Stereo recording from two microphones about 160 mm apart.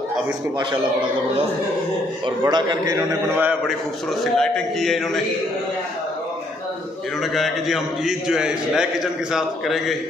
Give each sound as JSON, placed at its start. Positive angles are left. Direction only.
{"t": 2.2, "sound": "a man's voice", "side_deg": -25}
{"t": 4.2, "sound": "a man's voice", "side_deg": 0}
{"t": 7.3, "sound": "a man's voice", "side_deg": 0}